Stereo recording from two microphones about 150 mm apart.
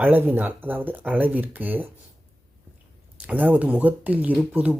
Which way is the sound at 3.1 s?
10° right (ahead or behind).